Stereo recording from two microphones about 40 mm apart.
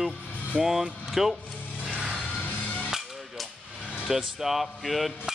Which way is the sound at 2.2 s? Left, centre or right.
Left.